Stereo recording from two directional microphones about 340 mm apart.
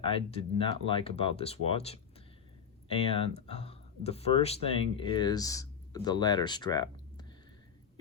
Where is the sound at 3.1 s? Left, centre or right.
Centre.